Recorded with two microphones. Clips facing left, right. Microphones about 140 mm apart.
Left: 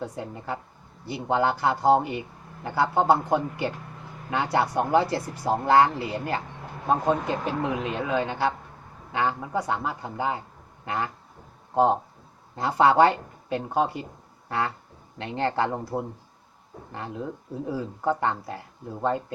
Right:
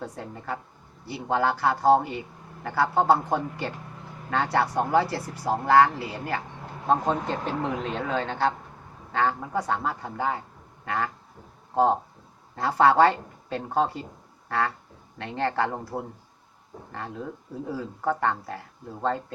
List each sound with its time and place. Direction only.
0.0 s speech: 15° left (ahead or behind)
6.8 s speech: 10° left (ahead or behind)
15.2 s speech: 20° left (ahead or behind)